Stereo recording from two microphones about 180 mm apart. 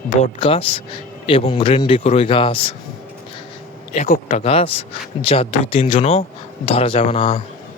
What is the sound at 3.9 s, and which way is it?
Speech, 45° left (ahead or behind).